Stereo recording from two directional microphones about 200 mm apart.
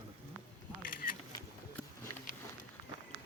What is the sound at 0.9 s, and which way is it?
Single-lens reflex camera, 45° left (ahead or behind).